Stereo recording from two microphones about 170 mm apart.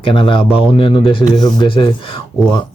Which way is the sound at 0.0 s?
30° left (ahead or behind).